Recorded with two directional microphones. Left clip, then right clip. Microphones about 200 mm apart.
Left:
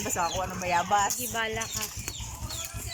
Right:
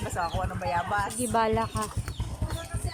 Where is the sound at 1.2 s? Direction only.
20° right (ahead or behind).